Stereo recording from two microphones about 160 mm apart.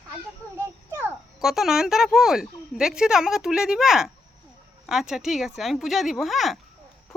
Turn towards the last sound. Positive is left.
turn(degrees=0)  # may be behind; listen again after turning